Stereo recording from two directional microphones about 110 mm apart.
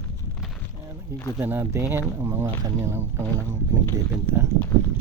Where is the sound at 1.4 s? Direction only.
20° right (ahead or behind).